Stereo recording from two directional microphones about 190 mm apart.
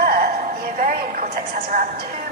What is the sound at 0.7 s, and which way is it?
Speech, 50° right (ahead or behind).